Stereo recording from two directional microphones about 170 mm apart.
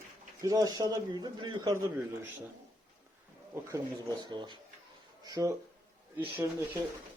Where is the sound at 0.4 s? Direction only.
20° right (ahead or behind).